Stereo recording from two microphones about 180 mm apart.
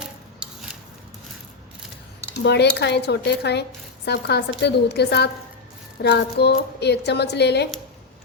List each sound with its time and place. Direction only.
2.4 s a woman's voice: 70° left (ahead or behind)